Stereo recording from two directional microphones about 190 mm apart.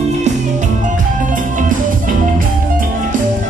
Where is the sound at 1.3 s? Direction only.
45° right (ahead or behind).